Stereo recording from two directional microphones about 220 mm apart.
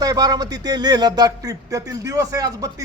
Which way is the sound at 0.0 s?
15° right (ahead or behind).